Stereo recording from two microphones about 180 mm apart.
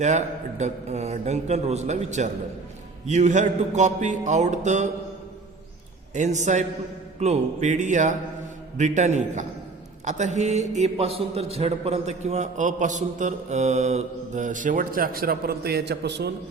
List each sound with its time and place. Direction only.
0.0 s a man's voice: 40° right (ahead or behind)
6.1 s a man's voice: 40° right (ahead or behind); by 16.3 s 70° right (ahead or behind)